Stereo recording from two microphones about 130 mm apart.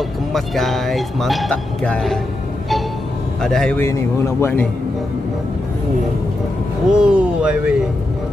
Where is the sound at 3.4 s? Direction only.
5° left (ahead or behind).